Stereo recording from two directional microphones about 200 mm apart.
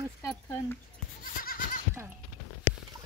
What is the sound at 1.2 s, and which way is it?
Goat, 45° left (ahead or behind).